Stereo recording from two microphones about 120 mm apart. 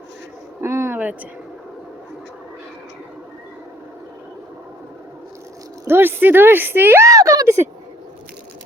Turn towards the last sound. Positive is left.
turn(degrees=-25)  # may be behind; listen again after turning